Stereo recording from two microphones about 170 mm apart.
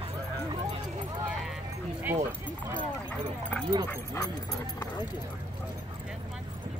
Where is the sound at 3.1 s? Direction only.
5° left (ahead or behind).